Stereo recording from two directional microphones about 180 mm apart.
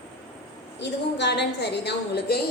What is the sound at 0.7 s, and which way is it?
A woman's voice, 70° left (ahead or behind).